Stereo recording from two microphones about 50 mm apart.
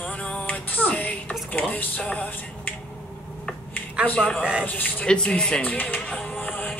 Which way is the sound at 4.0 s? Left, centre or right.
Centre.